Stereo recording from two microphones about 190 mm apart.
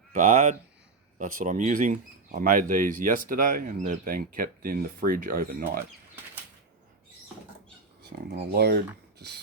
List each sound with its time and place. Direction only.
0.1 s speech: 40° right (ahead or behind)
8.3 s speech: 55° right (ahead or behind)